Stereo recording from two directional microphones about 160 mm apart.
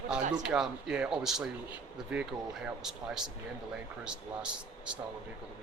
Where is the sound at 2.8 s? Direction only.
5° right (ahead or behind).